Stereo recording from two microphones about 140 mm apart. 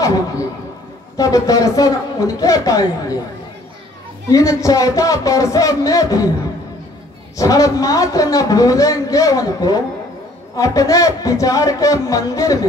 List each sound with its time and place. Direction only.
0.0 s speech: 25° left (ahead or behind)
4.3 s speech: 25° left (ahead or behind)
7.3 s speech: 25° left (ahead or behind)